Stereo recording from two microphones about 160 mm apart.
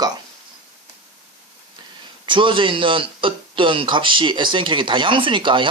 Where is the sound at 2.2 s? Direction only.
30° right (ahead or behind).